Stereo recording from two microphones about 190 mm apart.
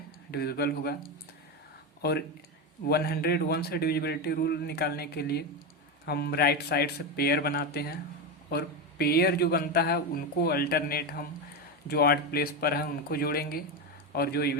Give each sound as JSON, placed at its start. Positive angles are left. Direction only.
{"t": 0.3, "sound": "a man's voice", "side_deg": 55}
{"t": 2.0, "sound": "a man's voice", "side_deg": 60}